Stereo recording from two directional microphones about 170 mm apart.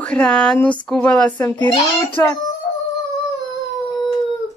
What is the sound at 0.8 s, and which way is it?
Speech, 5° left (ahead or behind).